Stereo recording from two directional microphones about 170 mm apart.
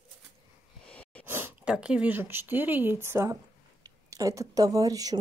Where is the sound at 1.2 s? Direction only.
10° right (ahead or behind).